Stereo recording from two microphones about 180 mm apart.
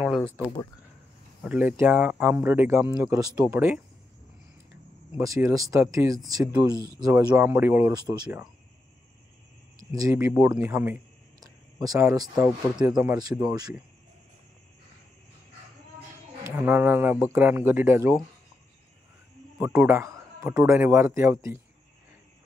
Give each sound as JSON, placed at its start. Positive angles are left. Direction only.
{"t": 0.0, "sound": "speech", "side_deg": 0}
{"t": 1.4, "sound": "a man's voice", "side_deg": -5}
{"t": 5.1, "sound": "a man's voice", "side_deg": -15}
{"t": 10.1, "sound": "a man's voice", "side_deg": -15}
{"t": 11.4, "sound": "a sound", "side_deg": -20}
{"t": 12.4, "sound": "speech", "side_deg": -5}
{"t": 12.9, "sound": "speech", "side_deg": -20}
{"t": 16.4, "sound": "a man's voice", "side_deg": -10}
{"t": 19.6, "sound": "a man's voice", "side_deg": -10}